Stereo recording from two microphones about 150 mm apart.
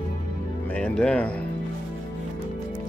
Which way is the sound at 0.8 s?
5° left (ahead or behind).